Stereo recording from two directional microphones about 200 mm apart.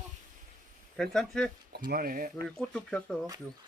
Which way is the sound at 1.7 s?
45° right (ahead or behind).